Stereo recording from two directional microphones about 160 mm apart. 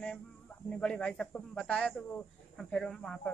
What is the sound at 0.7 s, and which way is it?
Speech, 5° left (ahead or behind).